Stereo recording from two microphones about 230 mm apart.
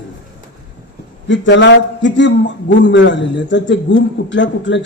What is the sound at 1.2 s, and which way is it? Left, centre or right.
A man's voice, left.